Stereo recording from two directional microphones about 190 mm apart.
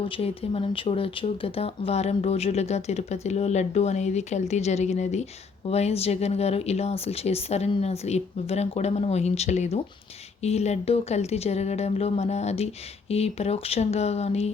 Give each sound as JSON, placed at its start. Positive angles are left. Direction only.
{"t": 0.0, "sound": "speech", "side_deg": 30}